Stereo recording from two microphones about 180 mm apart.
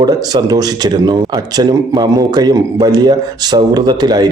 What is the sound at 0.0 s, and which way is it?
Speech, 25° right (ahead or behind).